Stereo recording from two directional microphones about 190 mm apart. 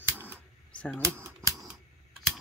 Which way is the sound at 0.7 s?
5° left (ahead or behind).